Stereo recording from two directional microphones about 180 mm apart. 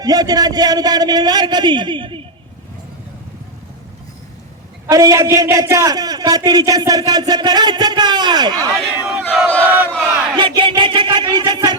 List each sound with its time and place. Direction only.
0.0 s a man's voice: 20° right (ahead or behind)
4.9 s a man's voice: 20° right (ahead or behind)
8.7 s speech: 5° right (ahead or behind)
9.6 s battle cry: 10° right (ahead or behind)
10.3 s music: 25° right (ahead or behind)